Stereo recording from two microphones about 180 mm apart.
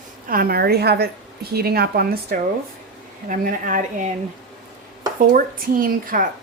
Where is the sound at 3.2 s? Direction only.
45° right (ahead or behind).